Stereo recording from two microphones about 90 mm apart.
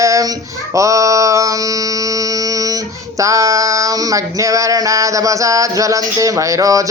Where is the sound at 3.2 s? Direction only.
35° right (ahead or behind).